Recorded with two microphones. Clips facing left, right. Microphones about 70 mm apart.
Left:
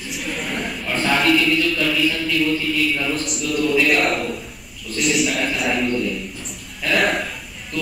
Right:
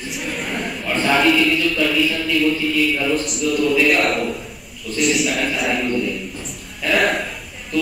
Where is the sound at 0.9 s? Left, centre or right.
Centre.